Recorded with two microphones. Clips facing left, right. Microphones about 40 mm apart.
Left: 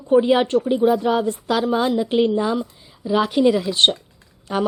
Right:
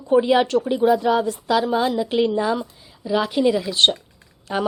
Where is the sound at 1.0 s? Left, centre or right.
Left.